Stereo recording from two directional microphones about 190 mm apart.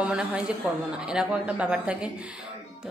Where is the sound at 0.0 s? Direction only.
5° right (ahead or behind).